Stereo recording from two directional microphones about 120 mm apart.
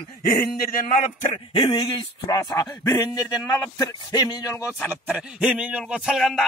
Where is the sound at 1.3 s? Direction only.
45° left (ahead or behind); by 4.7 s 25° left (ahead or behind).